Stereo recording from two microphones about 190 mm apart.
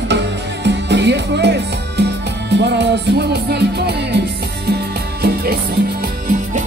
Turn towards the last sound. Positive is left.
turn(degrees=-40)  # may be behind; listen again after turning